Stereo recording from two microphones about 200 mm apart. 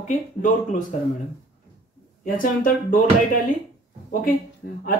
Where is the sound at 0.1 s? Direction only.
40° left (ahead or behind).